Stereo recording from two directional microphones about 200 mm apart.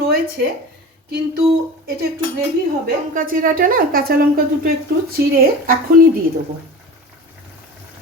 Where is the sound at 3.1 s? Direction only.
45° right (ahead or behind).